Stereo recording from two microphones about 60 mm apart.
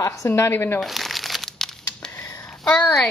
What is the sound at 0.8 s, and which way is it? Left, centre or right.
Crumpling, centre.